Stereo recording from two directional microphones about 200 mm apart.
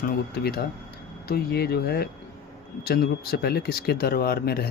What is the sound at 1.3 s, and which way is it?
Speech, 50° left (ahead or behind).